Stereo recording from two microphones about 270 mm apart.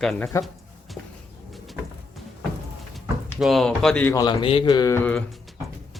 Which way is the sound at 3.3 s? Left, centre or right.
Centre.